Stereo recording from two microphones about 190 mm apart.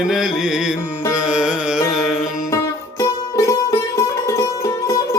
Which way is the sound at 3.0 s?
15° left (ahead or behind).